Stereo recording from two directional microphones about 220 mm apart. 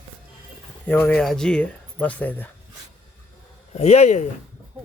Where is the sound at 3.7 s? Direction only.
30° left (ahead or behind).